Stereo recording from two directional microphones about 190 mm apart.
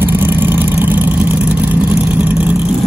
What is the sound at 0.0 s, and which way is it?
Vehicle, 10° right (ahead or behind).